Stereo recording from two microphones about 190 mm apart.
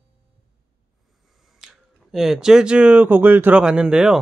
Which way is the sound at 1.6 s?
Centre (ahead or behind).